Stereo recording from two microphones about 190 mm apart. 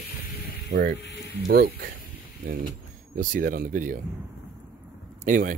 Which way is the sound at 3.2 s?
45° right (ahead or behind).